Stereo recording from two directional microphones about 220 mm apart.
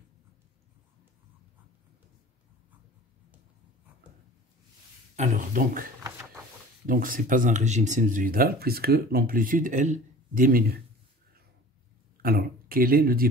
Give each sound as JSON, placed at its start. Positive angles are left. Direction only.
{"t": 5.1, "sound": "speech", "side_deg": -35}
{"t": 6.9, "sound": "speech", "side_deg": -40}
{"t": 12.2, "sound": "speech", "side_deg": -40}